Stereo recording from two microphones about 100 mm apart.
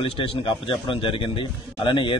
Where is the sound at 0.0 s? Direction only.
65° left (ahead or behind).